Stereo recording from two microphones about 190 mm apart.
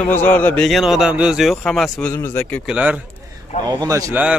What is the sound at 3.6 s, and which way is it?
Speech, 20° right (ahead or behind).